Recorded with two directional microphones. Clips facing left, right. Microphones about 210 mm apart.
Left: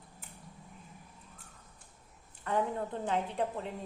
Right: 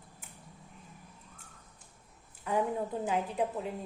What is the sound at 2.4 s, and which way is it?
A woman's voice, 10° right (ahead or behind).